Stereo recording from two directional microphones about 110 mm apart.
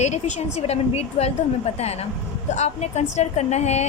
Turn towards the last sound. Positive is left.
turn(degrees=90)